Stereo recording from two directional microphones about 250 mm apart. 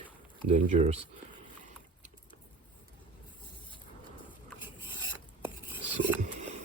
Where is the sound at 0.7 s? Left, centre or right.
Right.